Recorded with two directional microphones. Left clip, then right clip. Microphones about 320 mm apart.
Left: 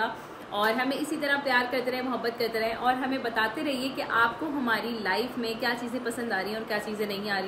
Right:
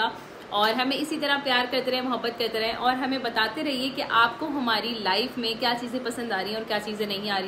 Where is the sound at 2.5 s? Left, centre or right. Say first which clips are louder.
Right 2 dB; centre.